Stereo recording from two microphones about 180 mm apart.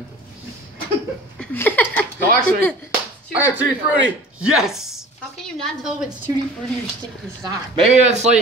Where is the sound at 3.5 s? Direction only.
5° right (ahead or behind).